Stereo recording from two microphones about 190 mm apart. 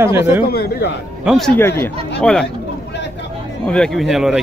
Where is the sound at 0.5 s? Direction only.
55° left (ahead or behind).